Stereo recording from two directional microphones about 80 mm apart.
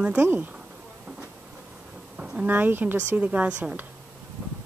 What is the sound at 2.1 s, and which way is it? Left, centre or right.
Speech, centre.